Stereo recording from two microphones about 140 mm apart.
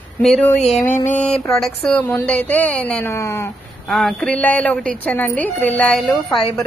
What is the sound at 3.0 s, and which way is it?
Speech, 20° left (ahead or behind).